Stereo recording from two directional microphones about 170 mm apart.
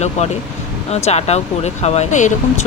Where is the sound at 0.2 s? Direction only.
40° left (ahead or behind).